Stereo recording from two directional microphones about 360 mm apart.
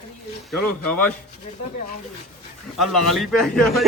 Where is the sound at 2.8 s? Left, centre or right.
Centre.